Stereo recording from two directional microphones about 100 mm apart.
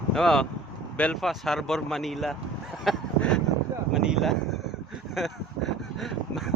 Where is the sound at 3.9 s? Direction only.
5° right (ahead or behind).